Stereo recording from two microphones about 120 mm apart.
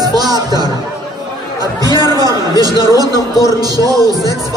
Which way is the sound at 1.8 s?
35° right (ahead or behind).